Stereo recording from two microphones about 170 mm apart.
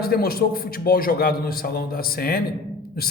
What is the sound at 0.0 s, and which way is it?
A man's voice, 65° left (ahead or behind).